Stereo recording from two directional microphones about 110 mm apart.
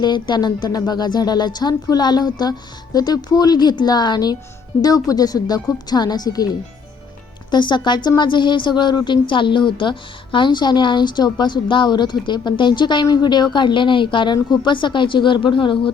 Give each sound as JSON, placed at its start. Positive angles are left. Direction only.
{"t": 0.0, "sound": "a woman's voice", "side_deg": 40}